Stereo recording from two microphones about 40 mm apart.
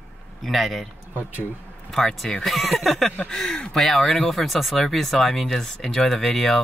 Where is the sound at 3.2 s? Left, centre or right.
Centre.